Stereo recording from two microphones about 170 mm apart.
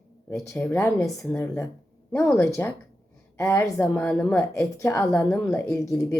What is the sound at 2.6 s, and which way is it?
A woman's voice, 15° left (ahead or behind).